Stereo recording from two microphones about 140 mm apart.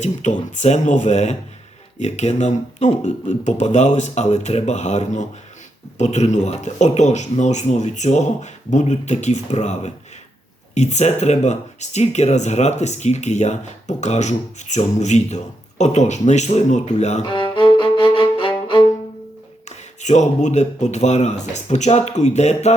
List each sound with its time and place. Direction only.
0.0 s speech: 55° left (ahead or behind)
17.2 s music: 35° left (ahead or behind)
19.6 s speech: 55° left (ahead or behind)